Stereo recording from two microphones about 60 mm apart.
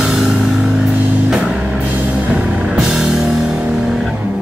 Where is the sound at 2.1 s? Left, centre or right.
Centre.